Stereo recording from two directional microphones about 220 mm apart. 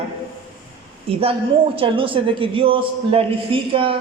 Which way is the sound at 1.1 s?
25° right (ahead or behind).